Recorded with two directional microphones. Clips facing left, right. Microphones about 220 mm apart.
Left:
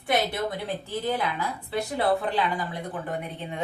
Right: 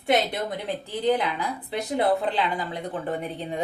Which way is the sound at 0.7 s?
20° right (ahead or behind).